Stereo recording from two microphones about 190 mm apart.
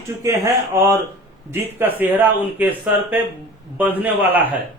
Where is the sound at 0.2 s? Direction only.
15° right (ahead or behind).